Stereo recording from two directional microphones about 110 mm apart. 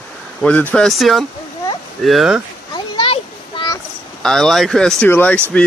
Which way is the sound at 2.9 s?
50° left (ahead or behind).